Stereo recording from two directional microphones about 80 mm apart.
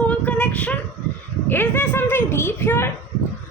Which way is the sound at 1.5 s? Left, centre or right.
Left.